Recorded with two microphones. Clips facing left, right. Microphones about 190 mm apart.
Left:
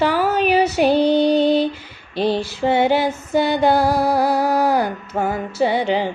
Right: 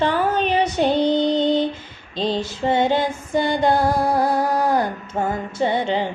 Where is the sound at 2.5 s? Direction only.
10° left (ahead or behind).